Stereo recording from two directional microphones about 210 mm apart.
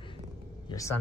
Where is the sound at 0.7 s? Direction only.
15° left (ahead or behind).